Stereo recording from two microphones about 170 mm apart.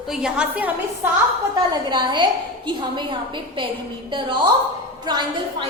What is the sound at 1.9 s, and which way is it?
Speech, 25° right (ahead or behind).